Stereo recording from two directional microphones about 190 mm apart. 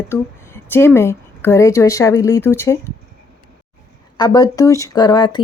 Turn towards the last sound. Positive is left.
turn(degrees=25)  # may be behind; listen again after turning